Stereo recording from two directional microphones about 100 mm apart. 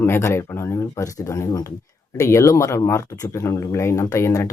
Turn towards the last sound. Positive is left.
turn(degrees=30)  # may be behind; listen again after turning